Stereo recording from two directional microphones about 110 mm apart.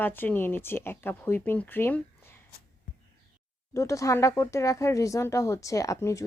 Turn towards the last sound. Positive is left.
turn(degrees=30)  # may be behind; listen again after turning